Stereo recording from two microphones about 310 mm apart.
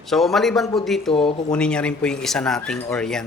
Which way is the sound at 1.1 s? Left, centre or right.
Centre.